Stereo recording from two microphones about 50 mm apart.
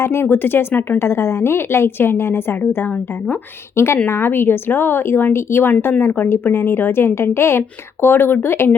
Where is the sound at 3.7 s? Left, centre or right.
Left.